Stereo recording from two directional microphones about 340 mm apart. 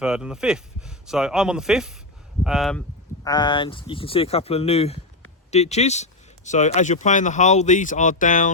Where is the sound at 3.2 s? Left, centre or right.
Centre.